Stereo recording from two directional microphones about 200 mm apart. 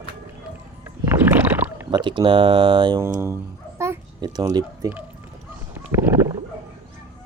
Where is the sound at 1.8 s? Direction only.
20° right (ahead or behind).